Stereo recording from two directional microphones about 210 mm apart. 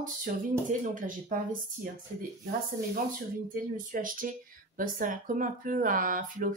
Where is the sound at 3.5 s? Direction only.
40° right (ahead or behind).